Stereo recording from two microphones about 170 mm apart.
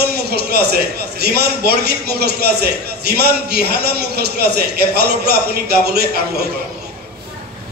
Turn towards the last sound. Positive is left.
turn(degrees=-70)  # may be behind; listen again after turning